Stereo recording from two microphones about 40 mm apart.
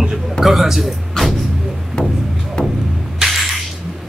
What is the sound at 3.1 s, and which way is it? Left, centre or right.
Music, centre.